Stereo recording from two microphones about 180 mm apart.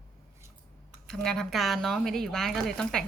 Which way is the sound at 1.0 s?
5° left (ahead or behind).